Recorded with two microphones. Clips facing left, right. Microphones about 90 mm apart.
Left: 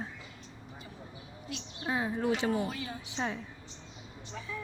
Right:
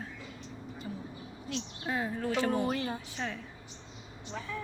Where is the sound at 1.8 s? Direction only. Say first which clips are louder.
Left 3 dB; 15° left (ahead or behind).